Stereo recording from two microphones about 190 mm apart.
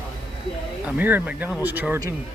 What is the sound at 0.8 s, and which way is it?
Speech, 10° right (ahead or behind).